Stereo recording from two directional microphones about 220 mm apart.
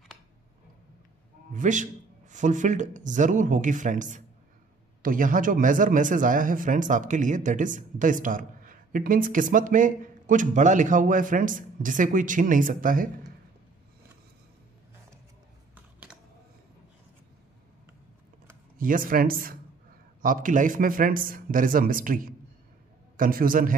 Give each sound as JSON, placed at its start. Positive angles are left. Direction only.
{"t": 1.5, "sound": "speech", "side_deg": -35}
{"t": 15.7, "sound": "typing", "side_deg": -5}
{"t": 18.8, "sound": "speech", "side_deg": -40}